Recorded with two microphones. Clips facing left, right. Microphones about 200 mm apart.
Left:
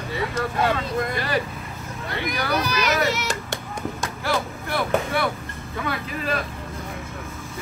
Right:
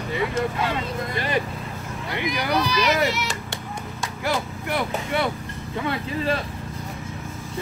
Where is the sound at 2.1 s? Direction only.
20° right (ahead or behind).